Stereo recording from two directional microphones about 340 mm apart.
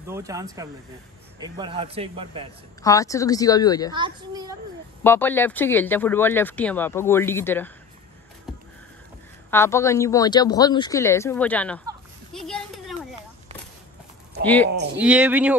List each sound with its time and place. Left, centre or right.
0.0 s speech: centre
2.8 s a woman's voice: centre
3.9 s speech: centre
5.0 s speech: centre
8.5 s a sound: centre
9.5 s a woman's voice: centre
12.3 s a sound: centre
14.4 s speech: centre